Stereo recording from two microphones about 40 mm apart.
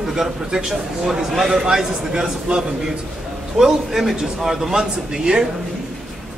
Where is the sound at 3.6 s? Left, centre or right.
Centre.